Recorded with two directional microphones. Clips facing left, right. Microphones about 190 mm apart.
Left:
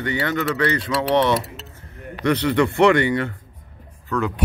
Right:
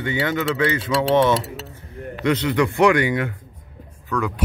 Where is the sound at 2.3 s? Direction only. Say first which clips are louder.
Left 1 dB; 10° right (ahead or behind).